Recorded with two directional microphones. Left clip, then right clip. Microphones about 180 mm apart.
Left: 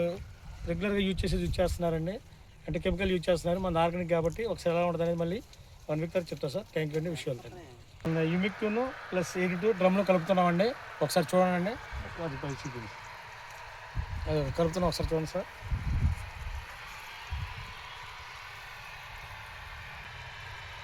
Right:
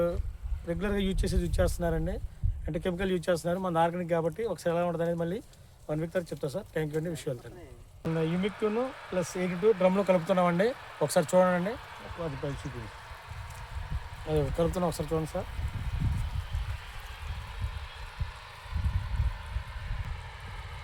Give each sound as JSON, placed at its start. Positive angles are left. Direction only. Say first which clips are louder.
{"t": 0.7, "sound": "speech", "louder": "even", "side_deg": -15}
{"t": 8.1, "sound": "speech", "louder": "even", "side_deg": -15}
{"t": 12.3, "sound": "speech", "louder": "right 1 dB", "side_deg": 40}
{"t": 14.3, "sound": "speech", "louder": "right 1 dB", "side_deg": -40}